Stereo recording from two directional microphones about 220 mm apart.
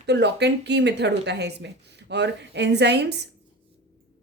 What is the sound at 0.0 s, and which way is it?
A woman's voice, 50° right (ahead or behind).